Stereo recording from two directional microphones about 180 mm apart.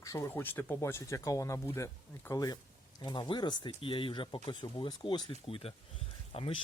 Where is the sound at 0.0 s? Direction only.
15° left (ahead or behind).